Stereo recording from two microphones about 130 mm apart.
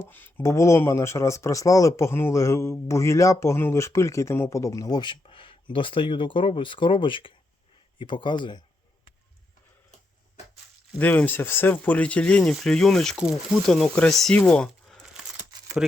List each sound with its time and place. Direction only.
0.1 s speech: 15° left (ahead or behind); by 8.6 s 35° left (ahead or behind)
10.9 s speech: 15° left (ahead or behind)
14.3 s a sound: 5° left (ahead or behind)
15.8 s speech: 5° right (ahead or behind)